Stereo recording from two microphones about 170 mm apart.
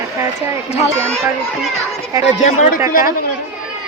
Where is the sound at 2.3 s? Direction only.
45° left (ahead or behind).